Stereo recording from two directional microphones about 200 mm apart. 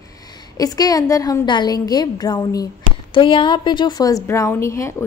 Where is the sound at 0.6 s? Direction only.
20° left (ahead or behind).